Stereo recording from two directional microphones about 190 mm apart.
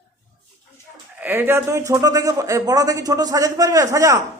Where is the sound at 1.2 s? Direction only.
10° right (ahead or behind).